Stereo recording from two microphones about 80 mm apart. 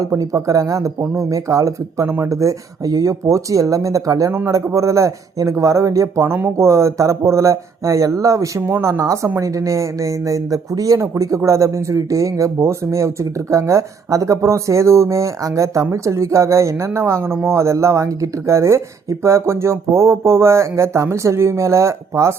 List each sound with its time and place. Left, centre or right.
0.0 s speech: right
2.0 s speech: right
2.3 s speech: right
4.3 s speech: right
4.5 s a man's voice: right